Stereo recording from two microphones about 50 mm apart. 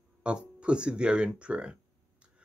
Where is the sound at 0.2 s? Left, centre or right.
Right.